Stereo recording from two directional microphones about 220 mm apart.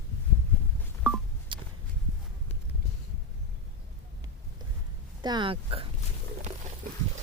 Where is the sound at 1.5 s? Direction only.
20° right (ahead or behind).